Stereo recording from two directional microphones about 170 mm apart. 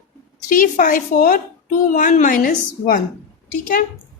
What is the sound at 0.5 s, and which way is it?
Speech, 55° left (ahead or behind).